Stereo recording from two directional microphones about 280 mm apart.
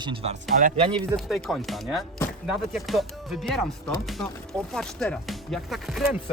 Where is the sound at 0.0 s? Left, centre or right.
Centre.